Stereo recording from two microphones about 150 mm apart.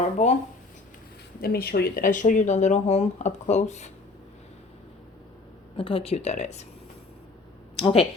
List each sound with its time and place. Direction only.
0.2 s speech: 50° left (ahead or behind)
1.4 s speech: 90° left; by 3.9 s 50° left (ahead or behind)
5.7 s speech: 35° left (ahead or behind)
7.8 s speech: 40° left (ahead or behind)